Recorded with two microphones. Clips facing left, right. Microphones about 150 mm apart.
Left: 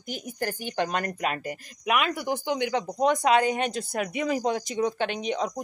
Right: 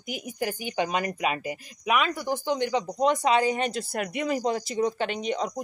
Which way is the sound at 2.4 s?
5° left (ahead or behind).